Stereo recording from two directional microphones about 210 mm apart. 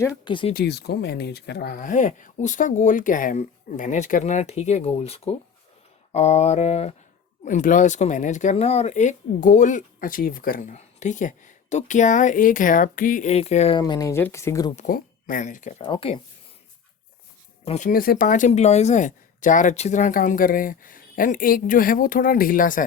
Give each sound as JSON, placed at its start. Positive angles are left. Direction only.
{"t": 0.3, "sound": "speech", "side_deg": 25}
{"t": 0.5, "sound": "speech", "side_deg": 50}
{"t": 14.8, "sound": "speech", "side_deg": 40}
{"t": 15.9, "sound": "speech", "side_deg": 25}
{"t": 17.7, "sound": "speech", "side_deg": 35}